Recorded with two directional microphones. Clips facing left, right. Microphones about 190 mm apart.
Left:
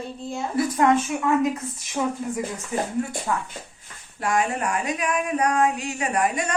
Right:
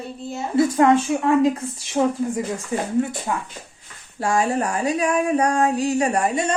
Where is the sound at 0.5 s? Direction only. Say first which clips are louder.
Right 4 dB; 25° right (ahead or behind).